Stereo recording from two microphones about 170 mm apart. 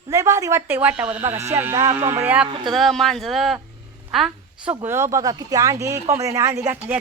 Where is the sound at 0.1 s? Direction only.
20° right (ahead or behind).